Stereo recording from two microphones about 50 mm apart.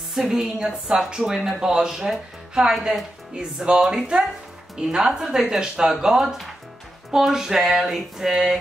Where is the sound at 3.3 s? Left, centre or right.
Centre.